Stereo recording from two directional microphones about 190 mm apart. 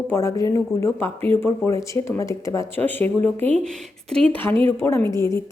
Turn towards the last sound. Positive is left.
turn(degrees=15)  # may be behind; listen again after turning